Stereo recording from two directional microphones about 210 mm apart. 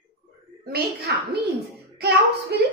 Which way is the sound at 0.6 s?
45° right (ahead or behind).